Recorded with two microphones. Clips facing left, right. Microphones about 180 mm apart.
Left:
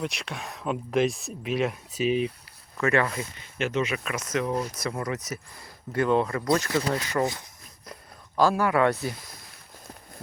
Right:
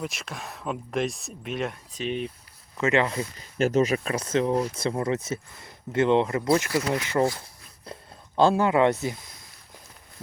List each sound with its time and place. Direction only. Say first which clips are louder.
0.0 s speech: left 2 dB; centre (ahead or behind)
2.7 s speech: right 1 dB; 20° right (ahead or behind)
6.7 s speech: even; 25° left (ahead or behind)
6.9 s speech: right 2 dB; 20° right (ahead or behind)
7.9 s speech: right 4 dB; 30° right (ahead or behind)